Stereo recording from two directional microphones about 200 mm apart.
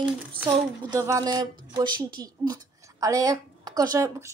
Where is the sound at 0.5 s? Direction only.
20° right (ahead or behind).